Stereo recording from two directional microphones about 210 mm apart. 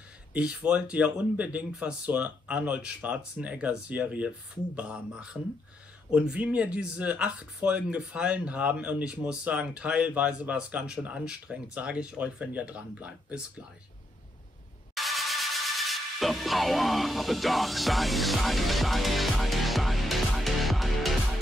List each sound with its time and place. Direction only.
0.3 s speech: 5° right (ahead or behind)
15.0 s music: centre (ahead or behind)